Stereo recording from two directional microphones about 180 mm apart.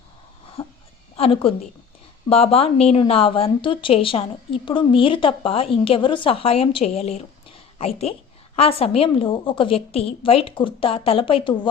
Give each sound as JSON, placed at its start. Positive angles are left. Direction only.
{"t": 0.6, "sound": "a woman's voice", "side_deg": 35}